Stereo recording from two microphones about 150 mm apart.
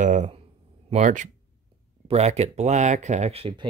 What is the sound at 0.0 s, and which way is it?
Speech, 55° right (ahead or behind).